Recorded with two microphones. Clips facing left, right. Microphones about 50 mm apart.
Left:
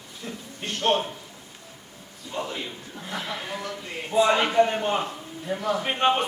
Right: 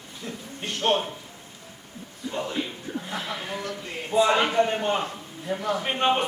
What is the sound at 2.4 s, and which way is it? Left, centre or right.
A man's voice, centre.